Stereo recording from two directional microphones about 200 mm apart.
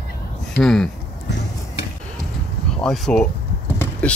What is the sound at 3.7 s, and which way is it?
Vehicle, 10° left (ahead or behind).